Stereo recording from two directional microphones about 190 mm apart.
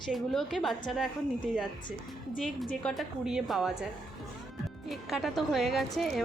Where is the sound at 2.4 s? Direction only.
5° left (ahead or behind).